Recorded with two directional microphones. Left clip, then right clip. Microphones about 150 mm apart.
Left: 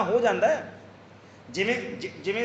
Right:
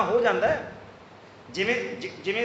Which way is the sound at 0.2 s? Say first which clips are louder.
Even; 40° left (ahead or behind).